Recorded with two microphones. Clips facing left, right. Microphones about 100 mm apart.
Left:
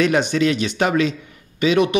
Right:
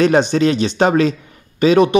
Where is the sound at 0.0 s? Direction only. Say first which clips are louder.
Right 4 dB; 35° right (ahead or behind).